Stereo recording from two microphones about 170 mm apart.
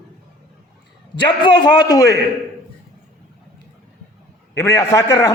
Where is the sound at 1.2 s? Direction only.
25° left (ahead or behind).